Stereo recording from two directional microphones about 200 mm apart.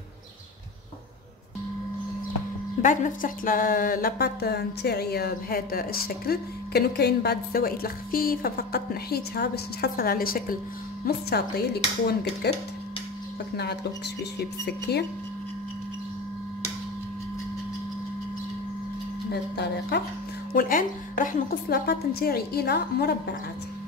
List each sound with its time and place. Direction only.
2.8 s speech: 40° left (ahead or behind)
14.4 s speech: 55° left (ahead or behind)
19.3 s speech: 55° left (ahead or behind)
20.5 s speech: 45° left (ahead or behind)